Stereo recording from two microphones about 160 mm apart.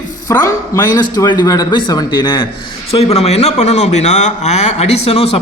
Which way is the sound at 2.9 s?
40° left (ahead or behind).